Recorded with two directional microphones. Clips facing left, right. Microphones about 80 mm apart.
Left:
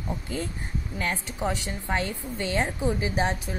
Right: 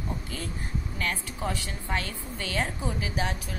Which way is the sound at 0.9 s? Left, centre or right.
Left.